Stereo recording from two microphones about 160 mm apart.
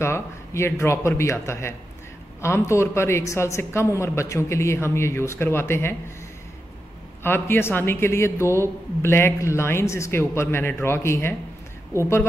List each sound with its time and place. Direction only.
0.0 s a woman's voice: 15° left (ahead or behind)
7.2 s a woman's voice: 15° left (ahead or behind)